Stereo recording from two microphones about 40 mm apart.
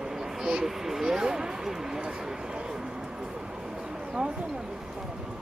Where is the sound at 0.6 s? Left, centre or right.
Centre.